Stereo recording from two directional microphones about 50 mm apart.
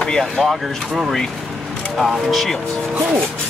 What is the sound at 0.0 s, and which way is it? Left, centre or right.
Speech, centre.